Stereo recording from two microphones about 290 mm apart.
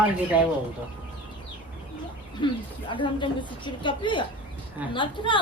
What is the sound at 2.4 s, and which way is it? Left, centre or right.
Speech, centre.